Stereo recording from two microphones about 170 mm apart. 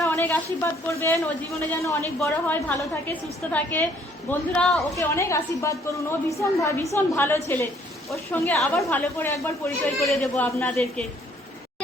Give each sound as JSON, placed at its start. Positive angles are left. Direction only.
{"t": 0.0, "sound": "a woman's voice", "side_deg": 15}
{"t": 4.9, "sound": "a woman's voice", "side_deg": 15}
{"t": 10.0, "sound": "a woman's voice", "side_deg": 5}